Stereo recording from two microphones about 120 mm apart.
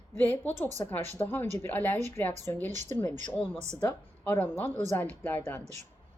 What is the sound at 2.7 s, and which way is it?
Speech, 80° right.